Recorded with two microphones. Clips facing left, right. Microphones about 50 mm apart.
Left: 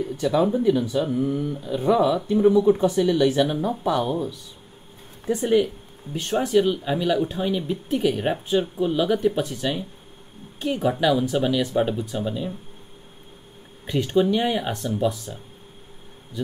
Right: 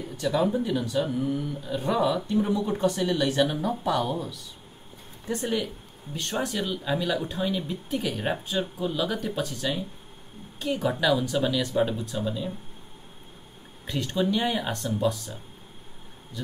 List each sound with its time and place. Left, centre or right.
0.2 s speech: centre
0.5 s speech: centre
5.4 s speech: centre
13.8 s speech: centre